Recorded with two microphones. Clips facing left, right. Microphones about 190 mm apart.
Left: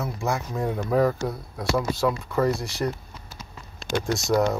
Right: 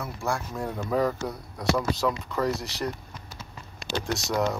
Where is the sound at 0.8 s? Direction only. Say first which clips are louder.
Left 3 dB; 5° left (ahead or behind).